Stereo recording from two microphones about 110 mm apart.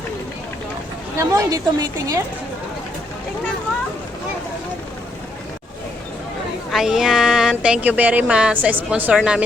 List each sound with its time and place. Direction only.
1.2 s a woman's voice: 30° right (ahead or behind)
6.7 s speech: 5° right (ahead or behind)